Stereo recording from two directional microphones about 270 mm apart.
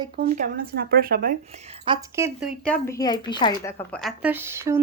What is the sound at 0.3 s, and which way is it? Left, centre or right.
Speech, right.